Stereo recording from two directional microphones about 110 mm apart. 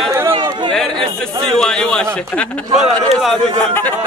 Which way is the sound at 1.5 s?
5° left (ahead or behind).